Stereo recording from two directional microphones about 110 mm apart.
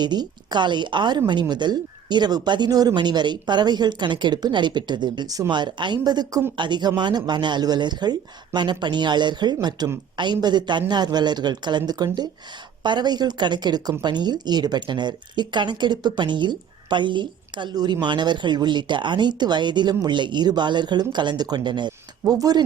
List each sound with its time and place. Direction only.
0.0 s speech: 40° right (ahead or behind)